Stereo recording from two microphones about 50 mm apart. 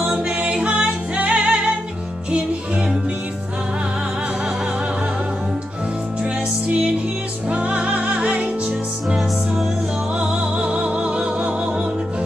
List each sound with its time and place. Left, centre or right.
0.4 s music: right
7.4 s music: right
10.1 s music: centre